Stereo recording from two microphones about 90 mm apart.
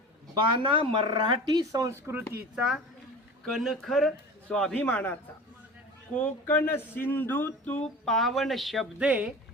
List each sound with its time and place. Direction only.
0.6 s speech: 70° right (ahead or behind); by 2.2 s 35° right (ahead or behind)
2.6 s speech: 5° right (ahead or behind)
4.4 s a man's voice: 15° left (ahead or behind)
6.1 s speech: 20° left (ahead or behind)
8.0 s speech: centre (ahead or behind)
9.0 s speech: 15° right (ahead or behind)